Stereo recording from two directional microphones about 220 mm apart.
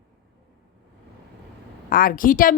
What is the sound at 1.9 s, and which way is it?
Speech, 40° left (ahead or behind).